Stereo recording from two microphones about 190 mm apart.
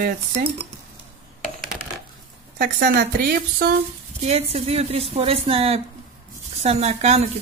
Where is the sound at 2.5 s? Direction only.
50° right (ahead or behind).